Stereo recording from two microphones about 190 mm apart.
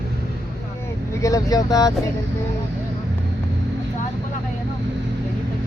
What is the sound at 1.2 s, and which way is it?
Speech, 20° left (ahead or behind).